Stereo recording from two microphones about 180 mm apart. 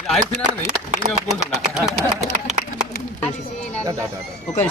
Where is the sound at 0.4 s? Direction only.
45° right (ahead or behind).